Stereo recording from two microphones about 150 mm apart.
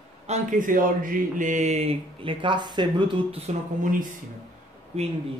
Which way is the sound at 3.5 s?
60° right (ahead or behind).